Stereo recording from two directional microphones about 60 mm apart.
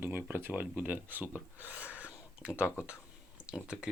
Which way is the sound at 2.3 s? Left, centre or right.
Right.